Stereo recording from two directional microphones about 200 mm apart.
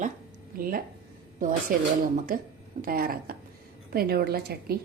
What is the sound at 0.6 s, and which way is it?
A woman's voice, 45° right (ahead or behind).